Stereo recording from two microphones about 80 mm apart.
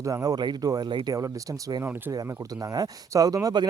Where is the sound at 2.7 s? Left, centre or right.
Right.